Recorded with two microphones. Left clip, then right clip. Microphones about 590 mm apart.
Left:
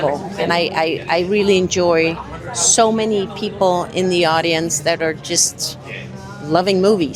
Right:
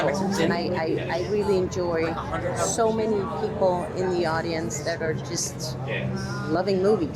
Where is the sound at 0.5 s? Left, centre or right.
Left.